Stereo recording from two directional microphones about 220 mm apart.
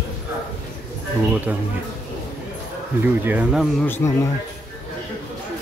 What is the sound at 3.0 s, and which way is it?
Speech, 5° right (ahead or behind).